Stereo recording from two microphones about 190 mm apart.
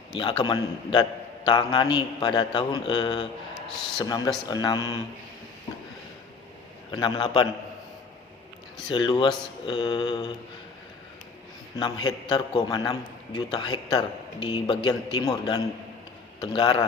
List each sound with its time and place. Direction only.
0.2 s a man's voice: 25° left (ahead or behind)
6.9 s a man's voice: 25° left (ahead or behind)
8.9 s a man's voice: 25° left (ahead or behind)
11.8 s a man's voice: 25° left (ahead or behind)